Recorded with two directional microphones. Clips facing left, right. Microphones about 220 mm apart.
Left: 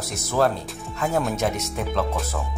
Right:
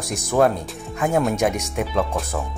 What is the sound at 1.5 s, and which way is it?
Speech, 15° right (ahead or behind).